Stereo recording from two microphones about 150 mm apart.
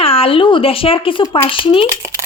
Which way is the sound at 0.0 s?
40° left (ahead or behind).